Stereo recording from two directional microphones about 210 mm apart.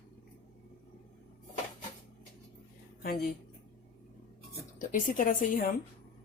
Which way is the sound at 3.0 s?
45° left (ahead or behind).